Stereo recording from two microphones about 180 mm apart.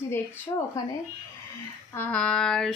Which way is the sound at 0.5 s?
20° left (ahead or behind).